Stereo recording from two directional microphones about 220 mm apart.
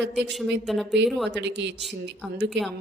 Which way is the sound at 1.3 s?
50° right (ahead or behind).